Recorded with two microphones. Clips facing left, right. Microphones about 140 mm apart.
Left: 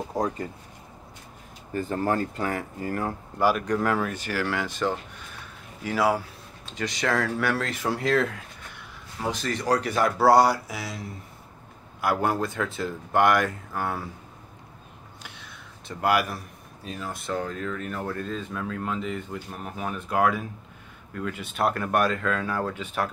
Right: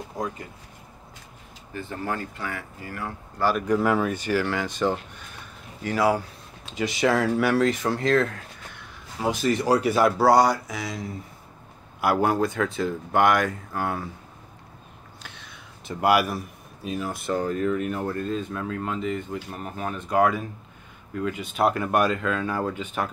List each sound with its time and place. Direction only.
0.1 s speech: 35° left (ahead or behind)
1.7 s speech: 45° left (ahead or behind)
3.5 s speech: 10° right (ahead or behind)
9.2 s speech: 10° right (ahead or behind)
15.2 s a sound: 5° left (ahead or behind)
16.0 s speech: 10° right (ahead or behind)